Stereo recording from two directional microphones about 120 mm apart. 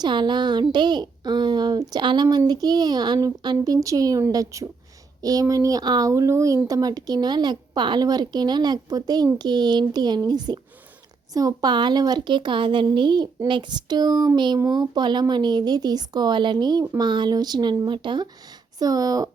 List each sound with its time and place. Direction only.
0.0 s a child's voice: 40° right (ahead or behind)